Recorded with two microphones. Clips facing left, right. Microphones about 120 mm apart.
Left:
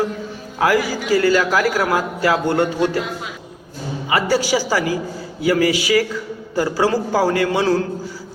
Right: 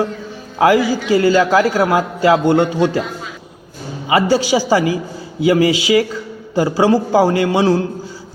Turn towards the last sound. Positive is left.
turn(degrees=-20)  # may be behind; listen again after turning